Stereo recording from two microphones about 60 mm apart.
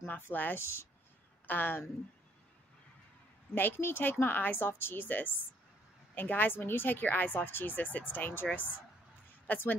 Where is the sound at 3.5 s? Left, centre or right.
Left.